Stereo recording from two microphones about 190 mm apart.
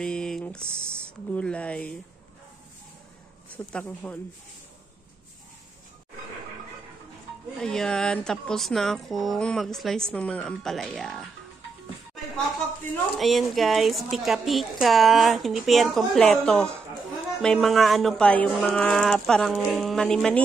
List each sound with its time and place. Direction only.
0.0 s a sound: 5° left (ahead or behind)
1.3 s speech: 5° left (ahead or behind)
3.5 s speech: 10° left (ahead or behind)
7.6 s speech: 5° left (ahead or behind)
13.2 s speech: centre (ahead or behind)